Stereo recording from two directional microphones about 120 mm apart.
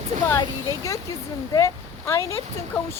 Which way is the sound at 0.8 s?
25° left (ahead or behind).